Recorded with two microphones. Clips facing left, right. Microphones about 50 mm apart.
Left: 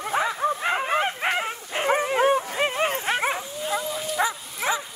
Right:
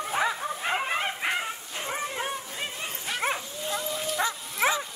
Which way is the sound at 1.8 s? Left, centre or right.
Left.